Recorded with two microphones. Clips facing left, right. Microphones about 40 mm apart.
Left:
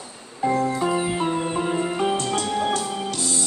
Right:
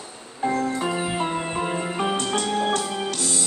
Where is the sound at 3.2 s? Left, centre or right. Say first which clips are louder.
Even; right.